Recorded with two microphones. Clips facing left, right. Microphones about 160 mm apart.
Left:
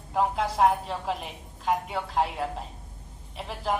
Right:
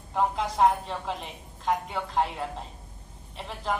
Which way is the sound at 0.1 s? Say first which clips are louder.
Left 1 dB; 5° left (ahead or behind).